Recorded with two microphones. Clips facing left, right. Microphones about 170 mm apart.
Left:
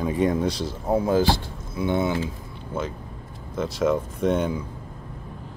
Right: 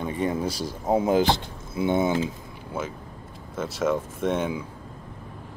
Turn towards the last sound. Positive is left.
turn(degrees=0)  # may be behind; listen again after turning